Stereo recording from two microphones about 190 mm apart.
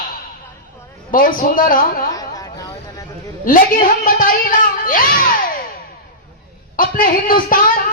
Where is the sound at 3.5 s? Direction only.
45° left (ahead or behind).